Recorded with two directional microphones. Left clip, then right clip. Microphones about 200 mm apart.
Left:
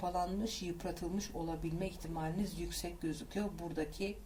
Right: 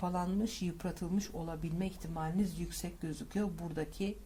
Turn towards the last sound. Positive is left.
turn(degrees=-40)  # may be behind; listen again after turning